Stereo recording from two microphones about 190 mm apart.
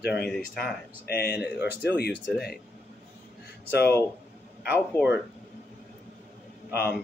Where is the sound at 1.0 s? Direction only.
55° left (ahead or behind).